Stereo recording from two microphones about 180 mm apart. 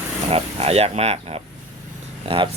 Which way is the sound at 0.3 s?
35° right (ahead or behind).